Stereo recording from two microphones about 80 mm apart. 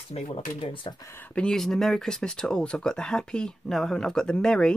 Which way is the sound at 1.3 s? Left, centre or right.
Centre.